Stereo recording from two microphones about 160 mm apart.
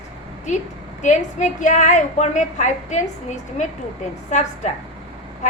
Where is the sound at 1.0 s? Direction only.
50° left (ahead or behind).